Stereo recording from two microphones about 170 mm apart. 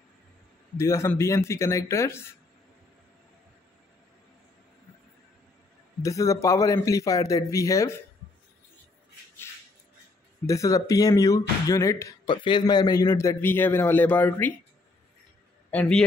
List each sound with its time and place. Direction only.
0.7 s a man's voice: 15° left (ahead or behind)
6.0 s speech: 20° left (ahead or behind)
10.4 s speech: 20° left (ahead or behind)
15.7 s a man's voice: 10° left (ahead or behind)